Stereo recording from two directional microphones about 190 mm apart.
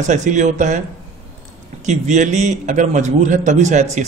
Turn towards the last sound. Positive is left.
turn(degrees=-40)  # may be behind; listen again after turning